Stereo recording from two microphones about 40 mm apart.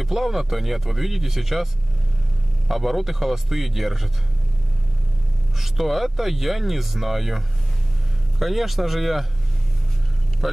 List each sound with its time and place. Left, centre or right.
0.0 s speech: centre
2.7 s speech: centre
5.6 s speech: centre
10.4 s speech: centre